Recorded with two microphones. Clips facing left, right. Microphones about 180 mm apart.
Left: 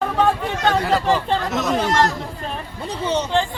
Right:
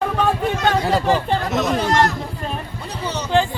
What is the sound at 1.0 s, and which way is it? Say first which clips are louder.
Speech: right 1 dB; 5° right (ahead or behind).